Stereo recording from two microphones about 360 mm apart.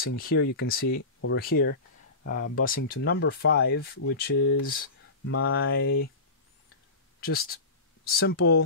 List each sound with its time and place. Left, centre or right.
0.0 s speech: left
0.8 s speech: left
1.3 s speech: left
7.2 s speech: left